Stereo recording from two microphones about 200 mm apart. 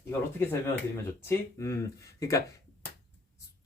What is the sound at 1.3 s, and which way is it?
Speech, 15° left (ahead or behind).